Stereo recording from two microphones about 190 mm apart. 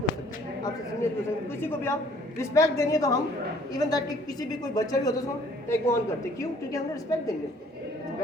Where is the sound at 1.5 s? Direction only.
10° left (ahead or behind).